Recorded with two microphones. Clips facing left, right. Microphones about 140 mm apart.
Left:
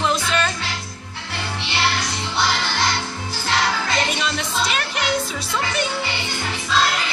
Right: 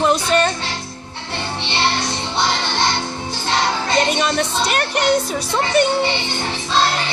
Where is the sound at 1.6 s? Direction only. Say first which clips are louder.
Right 2 dB; 25° right (ahead or behind).